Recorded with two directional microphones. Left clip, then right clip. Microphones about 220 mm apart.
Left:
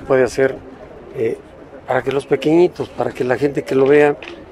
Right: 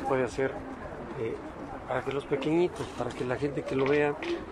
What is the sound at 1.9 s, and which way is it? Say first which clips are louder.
Speech: left 14 dB; 45° left (ahead or behind).